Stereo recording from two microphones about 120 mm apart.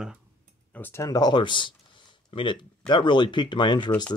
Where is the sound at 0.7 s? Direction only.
20° left (ahead or behind); by 4.0 s 40° left (ahead or behind).